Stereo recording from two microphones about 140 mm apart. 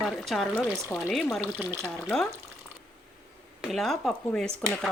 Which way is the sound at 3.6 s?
Centre (ahead or behind).